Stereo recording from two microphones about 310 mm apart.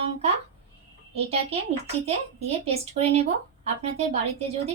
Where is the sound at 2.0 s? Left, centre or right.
Centre.